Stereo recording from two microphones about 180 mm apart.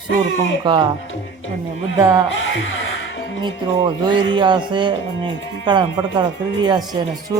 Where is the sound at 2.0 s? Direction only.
20° right (ahead or behind).